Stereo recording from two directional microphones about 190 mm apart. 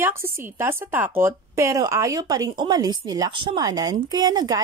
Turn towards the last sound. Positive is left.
turn(degrees=-20)  # may be behind; listen again after turning